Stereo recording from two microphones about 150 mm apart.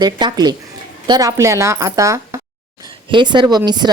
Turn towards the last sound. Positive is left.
turn(degrees=-30)  # may be behind; listen again after turning